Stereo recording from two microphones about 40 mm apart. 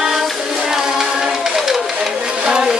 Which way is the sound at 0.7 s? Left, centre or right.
Centre.